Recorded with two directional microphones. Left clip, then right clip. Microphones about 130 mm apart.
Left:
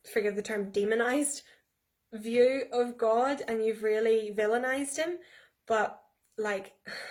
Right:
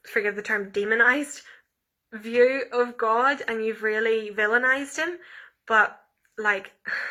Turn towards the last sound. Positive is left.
turn(degrees=35)  # may be behind; listen again after turning